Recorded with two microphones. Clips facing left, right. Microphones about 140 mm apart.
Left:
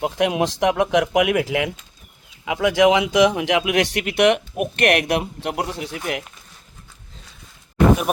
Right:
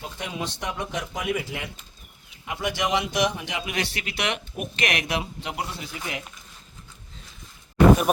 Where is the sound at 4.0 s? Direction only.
55° left (ahead or behind).